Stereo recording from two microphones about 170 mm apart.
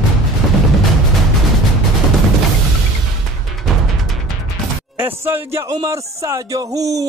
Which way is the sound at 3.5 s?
Centre (ahead or behind).